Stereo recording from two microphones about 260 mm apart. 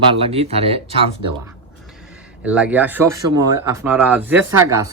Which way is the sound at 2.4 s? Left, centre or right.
Centre.